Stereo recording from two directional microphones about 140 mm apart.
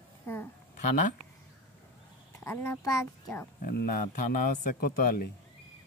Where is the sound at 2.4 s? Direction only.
15° left (ahead or behind).